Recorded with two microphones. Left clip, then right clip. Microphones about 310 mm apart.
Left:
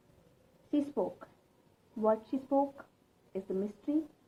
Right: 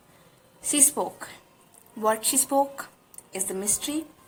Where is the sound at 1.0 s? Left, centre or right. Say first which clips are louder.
Right 6 dB; centre.